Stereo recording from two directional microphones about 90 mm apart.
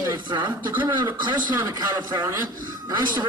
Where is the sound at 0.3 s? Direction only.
55° right (ahead or behind).